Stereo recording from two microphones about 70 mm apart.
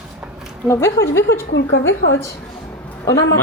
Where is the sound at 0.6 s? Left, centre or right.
Left.